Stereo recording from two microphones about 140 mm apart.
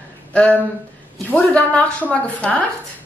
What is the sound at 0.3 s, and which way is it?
A woman's voice, 10° left (ahead or behind).